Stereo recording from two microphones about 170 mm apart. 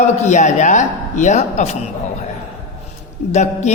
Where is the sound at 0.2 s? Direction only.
45° left (ahead or behind).